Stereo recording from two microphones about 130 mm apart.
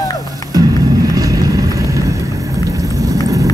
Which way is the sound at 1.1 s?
30° right (ahead or behind).